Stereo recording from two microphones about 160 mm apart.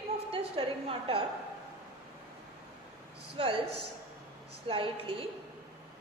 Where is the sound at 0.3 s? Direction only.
35° right (ahead or behind).